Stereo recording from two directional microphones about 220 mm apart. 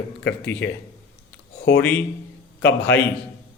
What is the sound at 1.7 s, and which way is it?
Speech, 5° left (ahead or behind).